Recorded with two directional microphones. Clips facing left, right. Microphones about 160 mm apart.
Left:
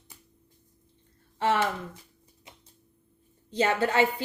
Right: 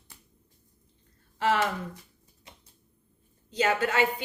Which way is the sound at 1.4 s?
25° left (ahead or behind).